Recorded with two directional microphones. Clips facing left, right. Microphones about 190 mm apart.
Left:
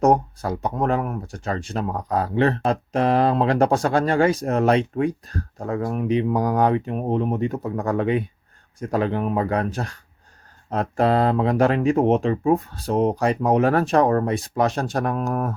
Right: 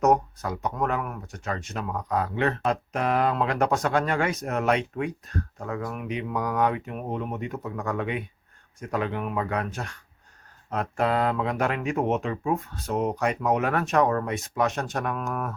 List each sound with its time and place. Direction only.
0.0 s speech: 30° left (ahead or behind)